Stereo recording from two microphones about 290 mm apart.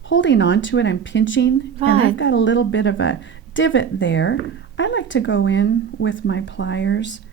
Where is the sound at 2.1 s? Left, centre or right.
Left.